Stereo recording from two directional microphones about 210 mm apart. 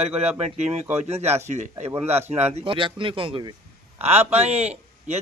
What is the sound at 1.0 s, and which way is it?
A man's voice, 30° right (ahead or behind).